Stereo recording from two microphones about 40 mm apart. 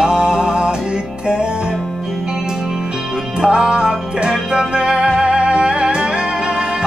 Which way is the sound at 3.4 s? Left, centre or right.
Centre.